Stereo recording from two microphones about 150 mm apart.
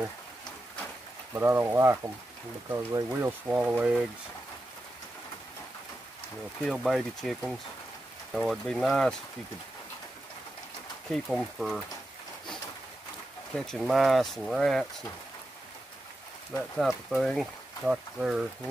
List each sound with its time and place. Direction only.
1.3 s speech: 15° right (ahead or behind)
6.6 s speech: centre (ahead or behind)
11.1 s speech: centre (ahead or behind)
13.6 s speech: centre (ahead or behind)
16.7 s speech: centre (ahead or behind)